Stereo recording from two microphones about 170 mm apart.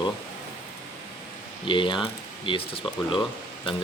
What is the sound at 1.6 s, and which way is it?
Speech, 30° left (ahead or behind).